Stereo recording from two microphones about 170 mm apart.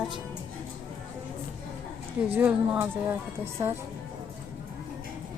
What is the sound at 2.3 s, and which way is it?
Speech, 10° right (ahead or behind).